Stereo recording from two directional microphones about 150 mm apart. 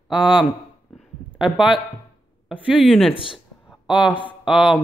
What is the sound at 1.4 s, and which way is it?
Speech, 5° right (ahead or behind).